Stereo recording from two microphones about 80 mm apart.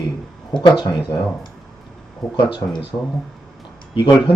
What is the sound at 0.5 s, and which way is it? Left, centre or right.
Speech, left.